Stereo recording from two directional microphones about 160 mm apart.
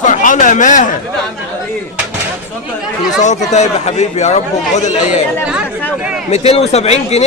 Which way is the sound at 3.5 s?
45° left (ahead or behind).